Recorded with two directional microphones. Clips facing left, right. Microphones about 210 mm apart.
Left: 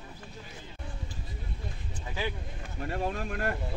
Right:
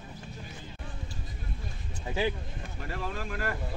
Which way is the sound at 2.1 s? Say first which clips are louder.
Right 5 dB; 25° right (ahead or behind).